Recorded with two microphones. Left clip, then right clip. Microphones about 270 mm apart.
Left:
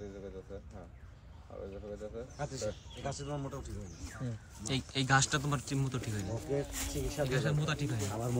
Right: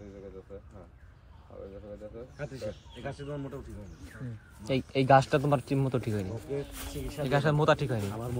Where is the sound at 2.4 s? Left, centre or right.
Centre.